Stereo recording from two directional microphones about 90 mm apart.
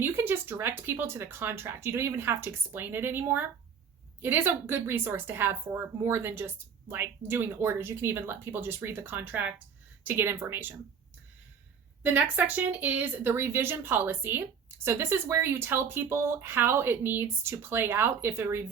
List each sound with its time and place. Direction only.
0.0 s speech: 25° right (ahead or behind)
12.0 s speech: 20° right (ahead or behind)